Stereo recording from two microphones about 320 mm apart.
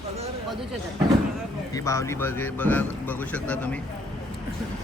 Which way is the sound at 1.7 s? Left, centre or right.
Centre.